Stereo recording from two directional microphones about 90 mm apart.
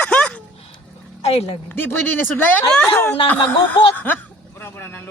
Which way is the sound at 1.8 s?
20° left (ahead or behind).